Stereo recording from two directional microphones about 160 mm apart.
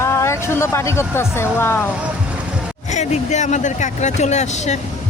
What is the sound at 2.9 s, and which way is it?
Speech, 45° left (ahead or behind).